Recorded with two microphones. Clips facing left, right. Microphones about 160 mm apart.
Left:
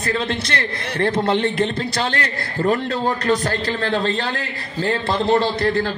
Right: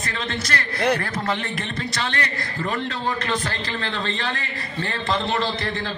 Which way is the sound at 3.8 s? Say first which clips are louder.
Left 6 dB; 40° left (ahead or behind).